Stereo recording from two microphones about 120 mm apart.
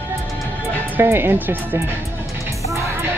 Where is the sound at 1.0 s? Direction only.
20° right (ahead or behind).